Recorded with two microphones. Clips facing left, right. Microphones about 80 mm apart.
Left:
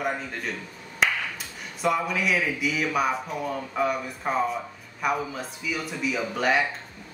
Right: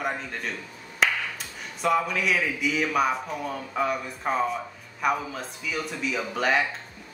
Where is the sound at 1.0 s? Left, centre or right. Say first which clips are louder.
Even; centre.